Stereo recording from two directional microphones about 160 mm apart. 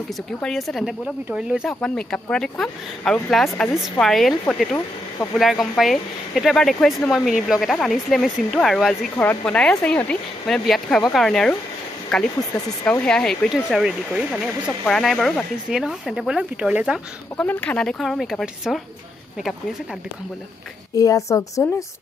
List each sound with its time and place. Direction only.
0.4 s speech: centre (ahead or behind)
9.1 s speech: 10° left (ahead or behind); by 17.5 s 5° right (ahead or behind)
17.5 s speech: 10° left (ahead or behind)
20.9 s a woman's voice: 20° left (ahead or behind)